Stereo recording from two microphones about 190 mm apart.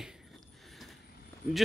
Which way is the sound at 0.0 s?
Centre (ahead or behind).